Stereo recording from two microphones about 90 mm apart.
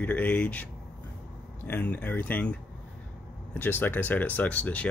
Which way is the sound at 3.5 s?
20° left (ahead or behind).